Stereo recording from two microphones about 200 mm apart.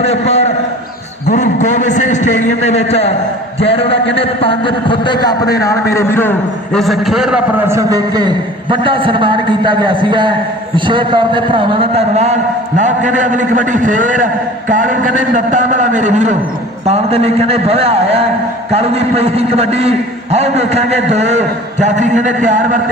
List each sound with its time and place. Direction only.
0.0 s a man's voice: 30° left (ahead or behind); by 22.8 s 40° right (ahead or behind)